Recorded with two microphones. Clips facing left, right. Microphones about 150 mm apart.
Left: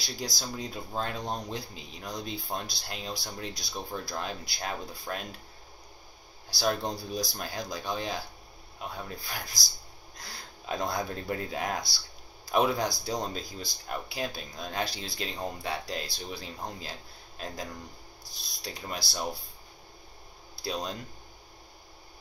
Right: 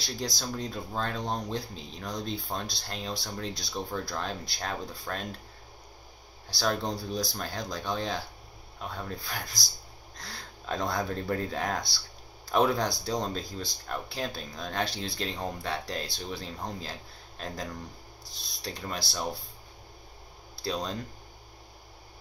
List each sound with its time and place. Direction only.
0.0 s speech: 5° left (ahead or behind)
6.5 s speech: 5° left (ahead or behind)
20.6 s speech: 5° left (ahead or behind)